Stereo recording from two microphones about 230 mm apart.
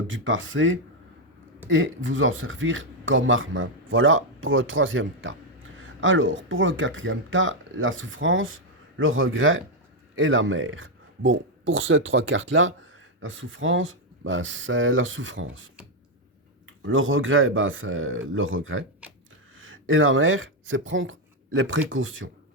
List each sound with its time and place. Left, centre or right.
0.1 s speech: right